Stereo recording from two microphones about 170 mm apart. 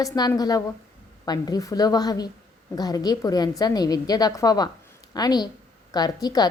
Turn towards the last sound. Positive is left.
turn(degrees=25)  # may be behind; listen again after turning